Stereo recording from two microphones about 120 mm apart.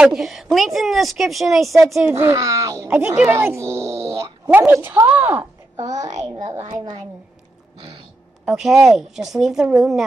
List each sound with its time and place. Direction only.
0.0 s a woman's voice: centre (ahead or behind)
2.1 s speech: 25° right (ahead or behind)
2.9 s a woman's voice: 15° right (ahead or behind)
5.8 s a child's voice: 35° right (ahead or behind)
8.5 s a woman's voice: 5° right (ahead or behind)